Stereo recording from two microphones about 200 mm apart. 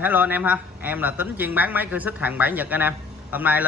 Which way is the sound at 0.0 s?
10° right (ahead or behind).